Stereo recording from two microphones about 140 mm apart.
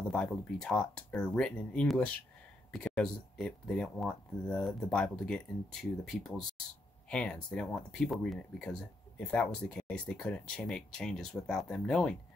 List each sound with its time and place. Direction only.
0.1 s speech: 5° left (ahead or behind)